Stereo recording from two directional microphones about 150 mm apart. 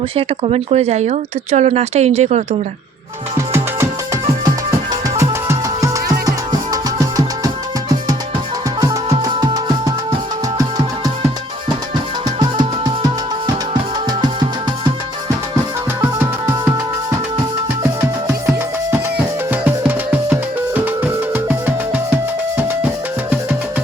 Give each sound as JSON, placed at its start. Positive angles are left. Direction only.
{"t": 0.2, "sound": "speech", "side_deg": -40}
{"t": 3.3, "sound": "music", "side_deg": -20}
{"t": 12.4, "sound": "music", "side_deg": -30}
{"t": 14.1, "sound": "music", "side_deg": -30}
{"t": 16.0, "sound": "music", "side_deg": -15}
{"t": 19.5, "sound": "music", "side_deg": -10}
{"t": 22.5, "sound": "music", "side_deg": -15}